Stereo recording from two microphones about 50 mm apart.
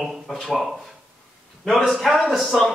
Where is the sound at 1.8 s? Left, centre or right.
Centre.